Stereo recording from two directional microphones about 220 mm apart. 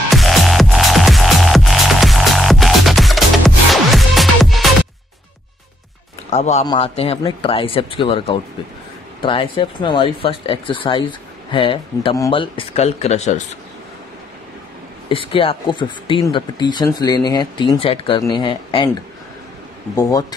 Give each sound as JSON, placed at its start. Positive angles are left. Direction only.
{"t": 0.1, "sound": "music", "side_deg": 0}
{"t": 6.3, "sound": "speech", "side_deg": 30}
{"t": 15.0, "sound": "speech", "side_deg": 25}
{"t": 20.0, "sound": "speech", "side_deg": 15}